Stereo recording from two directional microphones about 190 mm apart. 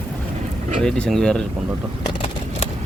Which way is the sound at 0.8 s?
5° left (ahead or behind).